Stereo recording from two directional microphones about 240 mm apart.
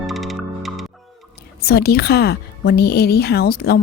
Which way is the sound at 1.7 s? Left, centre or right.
Left.